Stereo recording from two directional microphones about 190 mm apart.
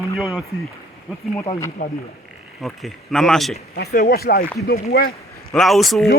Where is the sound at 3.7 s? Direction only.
55° left (ahead or behind).